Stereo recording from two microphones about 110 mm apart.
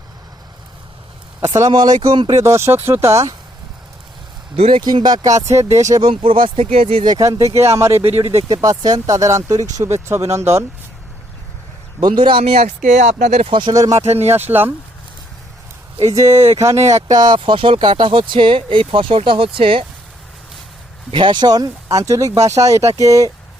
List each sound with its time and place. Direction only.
1.7 s speech: 40° right (ahead or behind)
2.3 s speech: 25° right (ahead or behind)
4.5 s speech: 65° right (ahead or behind)
4.8 s speech: 40° right (ahead or behind)
6.1 s speech: 50° right (ahead or behind); by 7.0 s 65° right (ahead or behind)
7.2 s speech: 30° right (ahead or behind)
11.9 s speech: 45° right (ahead or behind); by 13.5 s 90° right
13.5 s speech: 45° right (ahead or behind)
13.9 s speech: 75° right (ahead or behind)
14.3 s speech: 20° right (ahead or behind)
16.1 s speech: 25° right (ahead or behind); by 19.8 s 55° right (ahead or behind)
21.1 s speech: 50° right (ahead or behind); by 23.3 s 30° right (ahead or behind)